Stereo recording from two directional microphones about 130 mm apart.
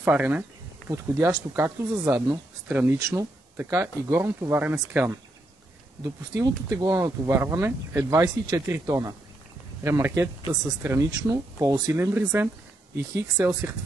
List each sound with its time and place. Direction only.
0.0 s speech: 15° right (ahead or behind)
6.3 s speech: 25° right (ahead or behind)